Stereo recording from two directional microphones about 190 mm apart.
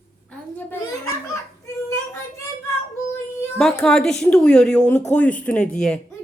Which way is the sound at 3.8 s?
5° left (ahead or behind).